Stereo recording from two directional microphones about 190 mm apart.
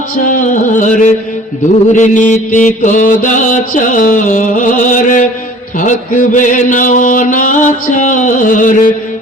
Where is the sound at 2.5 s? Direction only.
40° left (ahead or behind).